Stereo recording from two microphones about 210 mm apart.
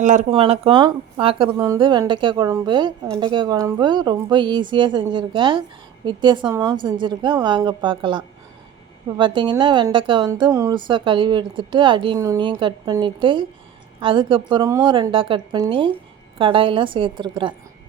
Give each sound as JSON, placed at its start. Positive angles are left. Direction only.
{"t": 0.0, "sound": "speech", "side_deg": -35}